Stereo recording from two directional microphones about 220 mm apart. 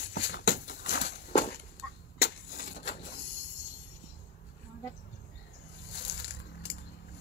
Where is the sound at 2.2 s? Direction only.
45° left (ahead or behind).